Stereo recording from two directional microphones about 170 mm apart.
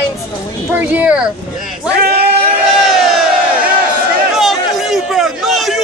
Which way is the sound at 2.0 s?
65° right (ahead or behind).